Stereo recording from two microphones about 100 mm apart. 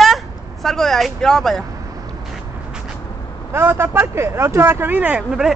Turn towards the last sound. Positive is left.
turn(degrees=-5)  # may be behind; listen again after turning